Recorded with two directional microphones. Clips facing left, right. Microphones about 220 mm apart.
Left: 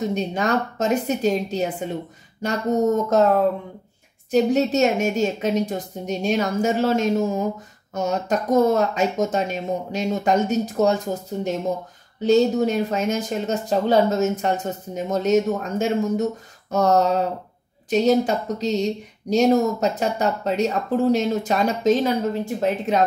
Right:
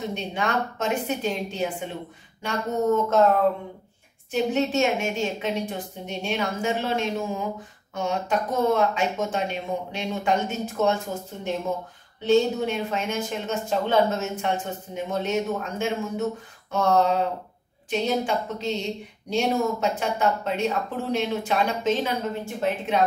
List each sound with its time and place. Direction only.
0.1 s speech: 40° left (ahead or behind)
4.3 s speech: 40° left (ahead or behind)